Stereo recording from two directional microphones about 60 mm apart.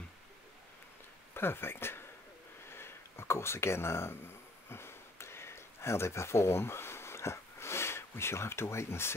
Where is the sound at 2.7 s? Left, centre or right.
Left.